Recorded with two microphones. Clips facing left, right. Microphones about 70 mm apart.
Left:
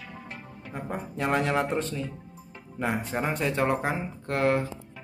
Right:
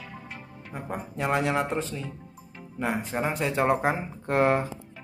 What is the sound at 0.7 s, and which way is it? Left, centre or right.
Music, centre.